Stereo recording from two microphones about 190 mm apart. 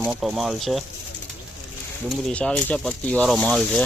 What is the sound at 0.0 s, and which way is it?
Speech, 5° right (ahead or behind).